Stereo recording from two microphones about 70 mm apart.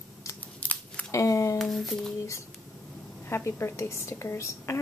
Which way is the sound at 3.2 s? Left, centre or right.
Left.